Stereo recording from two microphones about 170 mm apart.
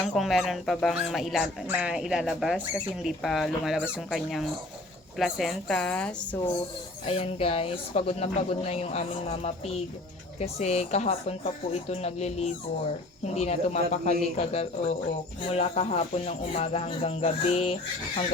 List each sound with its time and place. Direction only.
0.0 s speech: centre (ahead or behind)
7.0 s speech: 35° left (ahead or behind)